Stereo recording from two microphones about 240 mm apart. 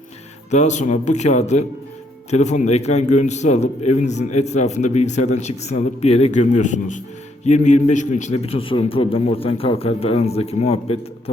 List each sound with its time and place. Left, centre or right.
0.5 s a man's voice: left